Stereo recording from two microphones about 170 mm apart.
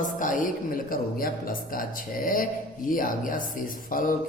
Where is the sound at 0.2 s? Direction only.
50° left (ahead or behind).